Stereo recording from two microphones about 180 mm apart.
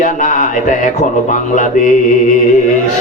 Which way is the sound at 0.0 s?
45° left (ahead or behind).